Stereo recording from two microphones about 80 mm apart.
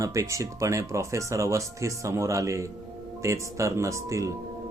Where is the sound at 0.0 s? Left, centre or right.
Right.